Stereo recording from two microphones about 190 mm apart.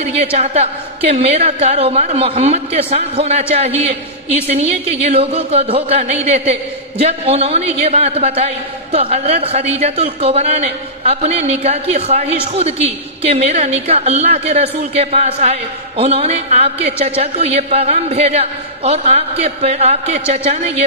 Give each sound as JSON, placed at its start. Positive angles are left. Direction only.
{"t": 0.0, "sound": "a man's voice", "side_deg": -35}